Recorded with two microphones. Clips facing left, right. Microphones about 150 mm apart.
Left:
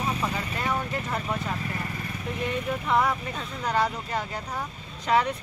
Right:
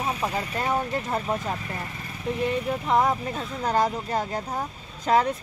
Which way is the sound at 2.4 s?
30° right (ahead or behind).